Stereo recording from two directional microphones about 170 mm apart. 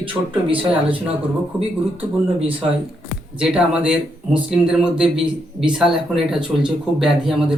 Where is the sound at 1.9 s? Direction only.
35° right (ahead or behind).